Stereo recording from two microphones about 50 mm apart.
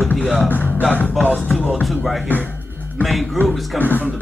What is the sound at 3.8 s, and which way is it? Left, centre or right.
Speech, left.